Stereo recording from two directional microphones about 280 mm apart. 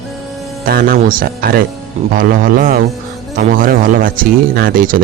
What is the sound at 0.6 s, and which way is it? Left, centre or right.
Speech, right.